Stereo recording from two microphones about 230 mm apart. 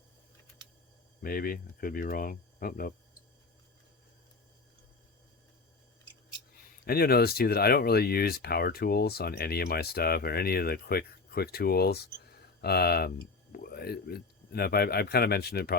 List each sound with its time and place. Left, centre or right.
1.2 s speech: left
6.8 s speech: left